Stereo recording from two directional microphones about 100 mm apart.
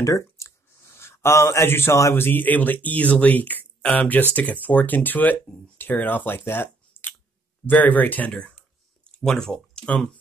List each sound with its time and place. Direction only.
0.0 s speech: 30° left (ahead or behind); by 10.1 s 10° left (ahead or behind)